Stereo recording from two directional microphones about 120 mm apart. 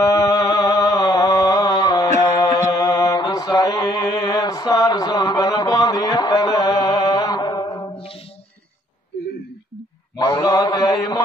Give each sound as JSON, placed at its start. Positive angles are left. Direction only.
{"t": 0.0, "sound": "a sound", "side_deg": 30}
{"t": 2.3, "sound": "mantra", "side_deg": 35}
{"t": 10.1, "sound": "mantra", "side_deg": 35}